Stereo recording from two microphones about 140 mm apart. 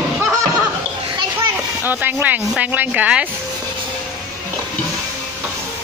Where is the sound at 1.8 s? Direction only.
15° right (ahead or behind).